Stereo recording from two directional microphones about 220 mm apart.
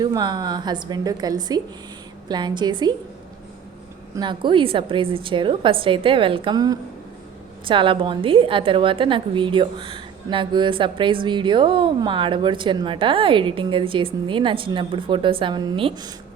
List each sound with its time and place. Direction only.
0.0 s a woman's voice: 20° right (ahead or behind)
4.1 s a woman's voice: 20° right (ahead or behind)